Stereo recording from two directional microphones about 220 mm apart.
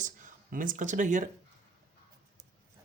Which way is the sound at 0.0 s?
35° right (ahead or behind).